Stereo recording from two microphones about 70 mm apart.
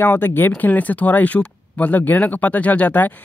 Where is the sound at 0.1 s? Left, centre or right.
Left.